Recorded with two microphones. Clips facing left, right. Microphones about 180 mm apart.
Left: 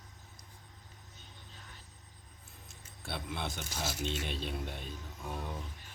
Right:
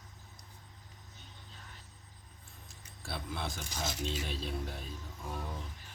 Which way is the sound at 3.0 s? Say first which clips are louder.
Left 1 dB; centre (ahead or behind).